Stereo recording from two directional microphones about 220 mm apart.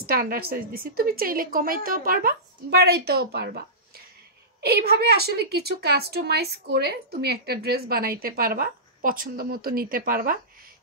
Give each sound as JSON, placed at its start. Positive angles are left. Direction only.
{"t": 0.0, "sound": "a woman's voice", "side_deg": -40}